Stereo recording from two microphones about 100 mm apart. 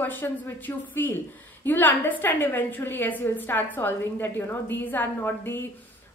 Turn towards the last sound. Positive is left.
turn(degrees=20)  # may be behind; listen again after turning